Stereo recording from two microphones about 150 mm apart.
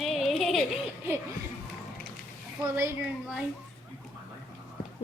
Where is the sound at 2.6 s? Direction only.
15° right (ahead or behind).